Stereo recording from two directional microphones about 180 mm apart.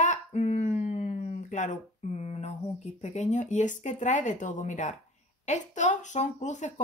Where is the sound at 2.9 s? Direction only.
40° left (ahead or behind).